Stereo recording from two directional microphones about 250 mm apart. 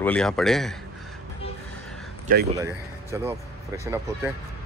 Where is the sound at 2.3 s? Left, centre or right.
Right.